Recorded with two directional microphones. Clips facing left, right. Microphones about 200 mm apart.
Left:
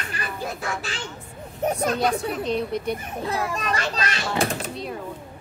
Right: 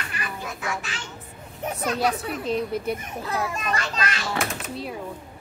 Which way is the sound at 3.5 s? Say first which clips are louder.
Left 1 dB; 35° left (ahead or behind).